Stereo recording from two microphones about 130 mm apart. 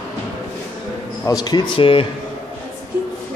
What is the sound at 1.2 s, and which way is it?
Speech, 30° left (ahead or behind).